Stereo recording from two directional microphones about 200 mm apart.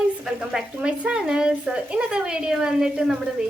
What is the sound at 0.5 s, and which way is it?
A woman's voice, 5° right (ahead or behind).